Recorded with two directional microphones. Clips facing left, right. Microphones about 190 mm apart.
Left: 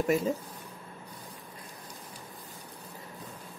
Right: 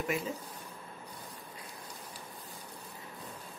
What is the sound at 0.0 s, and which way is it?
Speech, 40° left (ahead or behind).